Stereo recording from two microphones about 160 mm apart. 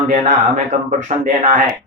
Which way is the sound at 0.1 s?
50° right (ahead or behind).